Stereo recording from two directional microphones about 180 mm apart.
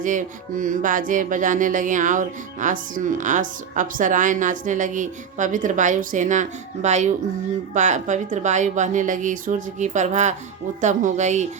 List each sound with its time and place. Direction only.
0.0 s music: 45° right (ahead or behind)
10.8 s speech: 40° right (ahead or behind)